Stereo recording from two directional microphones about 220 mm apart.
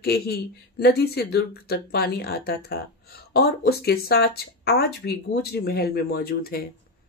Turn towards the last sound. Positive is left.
turn(degrees=45)  # may be behind; listen again after turning